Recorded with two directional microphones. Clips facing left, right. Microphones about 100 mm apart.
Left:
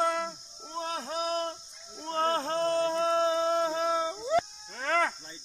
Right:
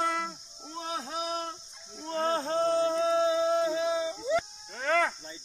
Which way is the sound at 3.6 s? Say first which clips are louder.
Even; 40° left (ahead or behind).